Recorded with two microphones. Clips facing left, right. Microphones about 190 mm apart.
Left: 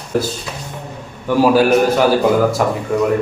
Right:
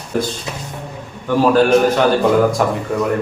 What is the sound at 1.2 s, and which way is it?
A man's voice, 10° left (ahead or behind).